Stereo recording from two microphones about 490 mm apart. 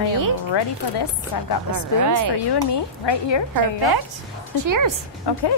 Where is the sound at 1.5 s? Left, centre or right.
Left.